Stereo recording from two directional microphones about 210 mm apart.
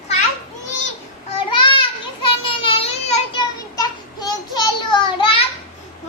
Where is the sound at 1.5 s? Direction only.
25° left (ahead or behind).